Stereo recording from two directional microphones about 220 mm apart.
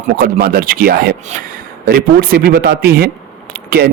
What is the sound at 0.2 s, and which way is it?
A man's voice, 45° right (ahead or behind).